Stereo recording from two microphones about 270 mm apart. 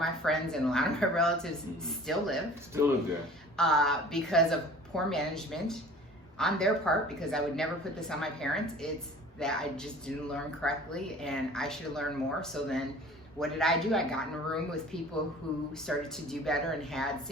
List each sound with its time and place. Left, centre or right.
0.0 s speech: centre
3.6 s speech: centre
15.9 s speech: centre